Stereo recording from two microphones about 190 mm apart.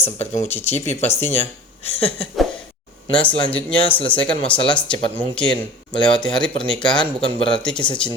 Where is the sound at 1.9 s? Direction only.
30° left (ahead or behind).